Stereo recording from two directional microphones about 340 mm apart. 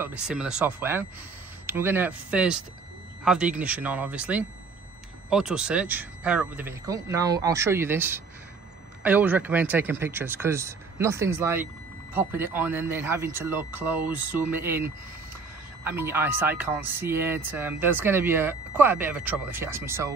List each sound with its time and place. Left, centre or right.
0.0 s speech: centre